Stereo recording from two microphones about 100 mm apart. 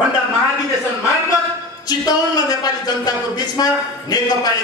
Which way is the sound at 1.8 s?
40° left (ahead or behind).